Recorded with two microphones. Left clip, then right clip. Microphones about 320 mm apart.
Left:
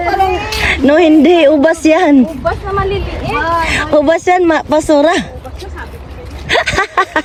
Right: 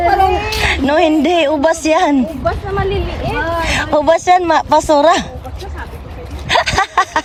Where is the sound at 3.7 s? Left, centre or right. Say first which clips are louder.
Even; centre.